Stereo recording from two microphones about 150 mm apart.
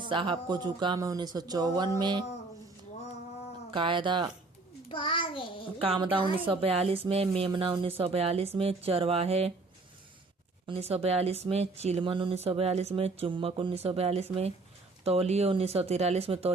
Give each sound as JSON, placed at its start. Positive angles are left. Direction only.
{"t": 0.1, "sound": "speech", "side_deg": -35}
{"t": 3.7, "sound": "speech", "side_deg": -35}
{"t": 4.9, "sound": "child singing", "side_deg": 35}
{"t": 5.8, "sound": "speech", "side_deg": -35}
{"t": 10.7, "sound": "speech", "side_deg": -40}